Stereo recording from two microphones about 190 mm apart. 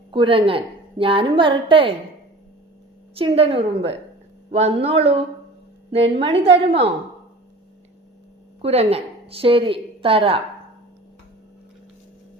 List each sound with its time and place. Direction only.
0.1 s a woman's voice: 30° right (ahead or behind)
3.2 s a woman's voice: 30° right (ahead or behind)
8.6 s a woman's voice: 30° right (ahead or behind)